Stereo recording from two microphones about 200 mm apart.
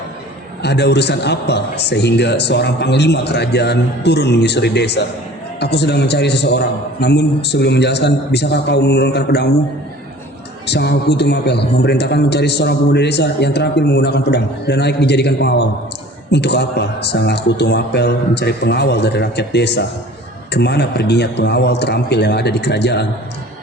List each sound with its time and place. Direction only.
0.6 s a man's voice: 55° left (ahead or behind)
10.7 s a man's voice: 55° left (ahead or behind)